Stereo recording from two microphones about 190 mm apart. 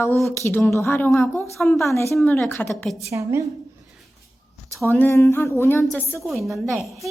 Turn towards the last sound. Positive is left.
turn(degrees=0)  # may be behind; listen again after turning